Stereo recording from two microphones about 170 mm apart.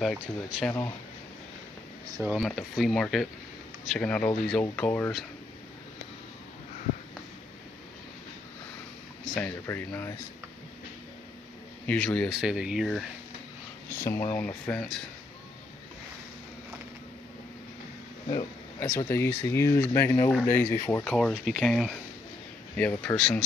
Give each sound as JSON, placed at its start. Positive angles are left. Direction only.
{"t": 0.0, "sound": "speech", "side_deg": 0}
{"t": 2.2, "sound": "speech", "side_deg": -5}
{"t": 9.2, "sound": "speech", "side_deg": 5}
{"t": 11.8, "sound": "speech", "side_deg": 10}
{"t": 13.9, "sound": "speech", "side_deg": 15}
{"t": 18.8, "sound": "speech", "side_deg": 15}